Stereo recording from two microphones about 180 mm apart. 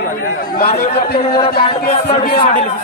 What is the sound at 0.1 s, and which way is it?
Speech, 50° left (ahead or behind).